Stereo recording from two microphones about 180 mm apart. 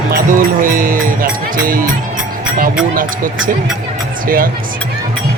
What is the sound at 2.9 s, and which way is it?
Speech, 50° right (ahead or behind).